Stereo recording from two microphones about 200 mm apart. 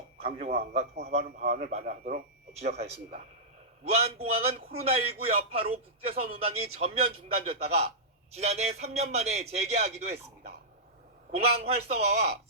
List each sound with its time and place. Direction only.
0.2 s a man's voice: 30° right (ahead or behind)